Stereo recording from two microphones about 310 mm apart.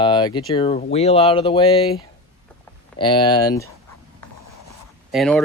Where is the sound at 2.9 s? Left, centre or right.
Centre.